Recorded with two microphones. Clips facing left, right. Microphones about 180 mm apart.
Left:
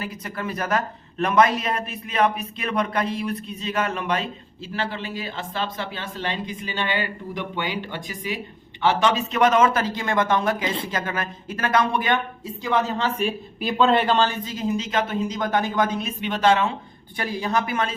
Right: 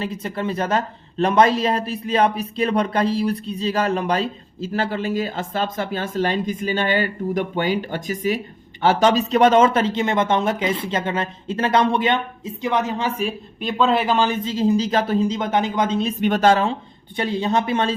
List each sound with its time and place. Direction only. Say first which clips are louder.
0.0 s speech: right 5 dB; 25° right (ahead or behind)
13.1 s speech: even; centre (ahead or behind)
14.4 s speech: right 7 dB; 30° right (ahead or behind)
16.2 s speech: right 3 dB; 45° right (ahead or behind)
17.2 s speech: right 4 dB; 25° right (ahead or behind)